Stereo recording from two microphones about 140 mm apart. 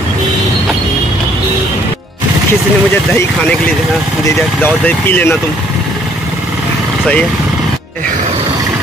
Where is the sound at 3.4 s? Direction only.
10° left (ahead or behind).